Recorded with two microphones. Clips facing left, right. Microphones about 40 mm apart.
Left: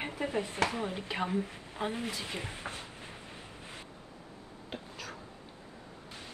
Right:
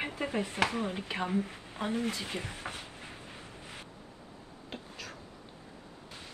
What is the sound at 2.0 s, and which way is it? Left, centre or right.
Speech, right.